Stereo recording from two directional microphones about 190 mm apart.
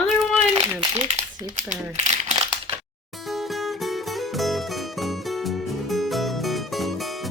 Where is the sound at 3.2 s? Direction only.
Centre (ahead or behind).